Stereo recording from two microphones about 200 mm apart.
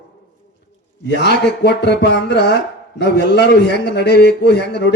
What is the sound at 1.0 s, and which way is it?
Speech, 55° left (ahead or behind).